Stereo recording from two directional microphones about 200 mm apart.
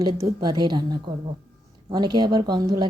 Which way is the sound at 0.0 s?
20° right (ahead or behind).